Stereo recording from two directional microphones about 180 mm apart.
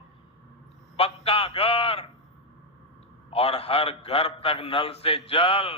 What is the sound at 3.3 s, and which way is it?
A man's voice, 35° left (ahead or behind).